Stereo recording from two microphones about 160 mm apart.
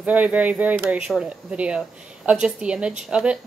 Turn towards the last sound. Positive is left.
turn(degrees=-5)  # may be behind; listen again after turning